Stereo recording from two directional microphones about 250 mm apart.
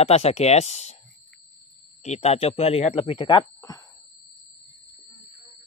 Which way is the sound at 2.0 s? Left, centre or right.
Left.